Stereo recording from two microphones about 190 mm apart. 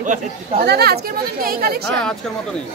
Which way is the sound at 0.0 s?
40° right (ahead or behind).